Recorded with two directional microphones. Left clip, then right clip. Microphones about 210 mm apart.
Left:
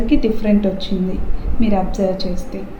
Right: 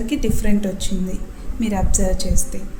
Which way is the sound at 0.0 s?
55° right (ahead or behind).